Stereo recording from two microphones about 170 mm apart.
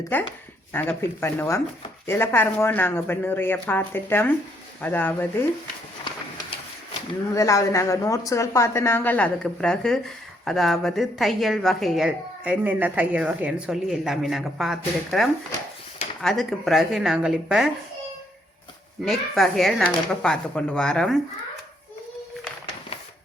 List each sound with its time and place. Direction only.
0.1 s speech: 10° left (ahead or behind)
7.3 s a woman's voice: 20° left (ahead or behind); by 17.7 s 5° right (ahead or behind)
19.0 s a woman's voice: centre (ahead or behind)